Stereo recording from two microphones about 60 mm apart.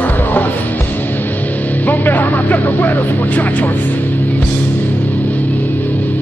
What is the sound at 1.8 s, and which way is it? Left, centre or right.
Speech, left.